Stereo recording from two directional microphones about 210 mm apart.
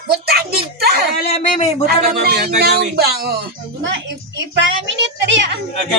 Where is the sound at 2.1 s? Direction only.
50° right (ahead or behind).